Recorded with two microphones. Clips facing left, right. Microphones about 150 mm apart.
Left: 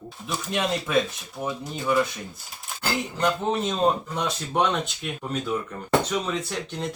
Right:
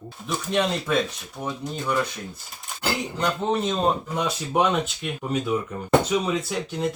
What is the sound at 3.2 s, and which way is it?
Speech, centre (ahead or behind).